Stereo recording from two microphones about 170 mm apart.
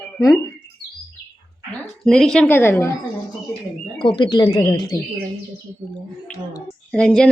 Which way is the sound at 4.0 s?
30° left (ahead or behind).